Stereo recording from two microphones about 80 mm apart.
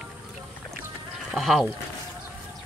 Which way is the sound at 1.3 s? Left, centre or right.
Centre.